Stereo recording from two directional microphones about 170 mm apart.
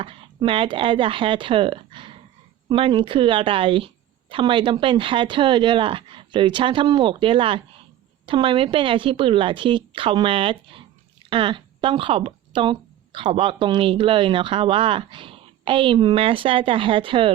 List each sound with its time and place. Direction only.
0.0 s a woman's voice: 30° right (ahead or behind)